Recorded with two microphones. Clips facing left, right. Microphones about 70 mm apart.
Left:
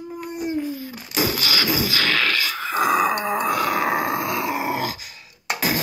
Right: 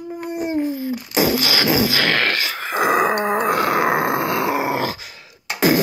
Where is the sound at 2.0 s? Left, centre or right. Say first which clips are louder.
Right 3 dB; right.